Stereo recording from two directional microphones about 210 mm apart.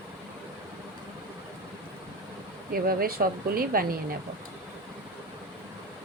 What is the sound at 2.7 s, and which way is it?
Speech, 45° right (ahead or behind).